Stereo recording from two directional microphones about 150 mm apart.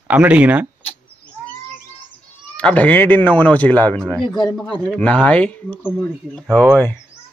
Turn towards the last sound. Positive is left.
turn(degrees=-15)  # may be behind; listen again after turning